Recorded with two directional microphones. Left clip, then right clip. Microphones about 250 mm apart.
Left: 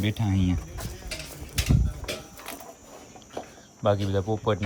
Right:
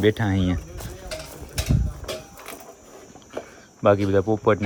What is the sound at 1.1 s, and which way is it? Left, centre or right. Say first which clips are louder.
Tick-tock: right 1 dB; right.